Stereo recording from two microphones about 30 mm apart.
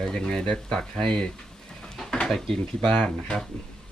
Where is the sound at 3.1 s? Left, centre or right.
Centre.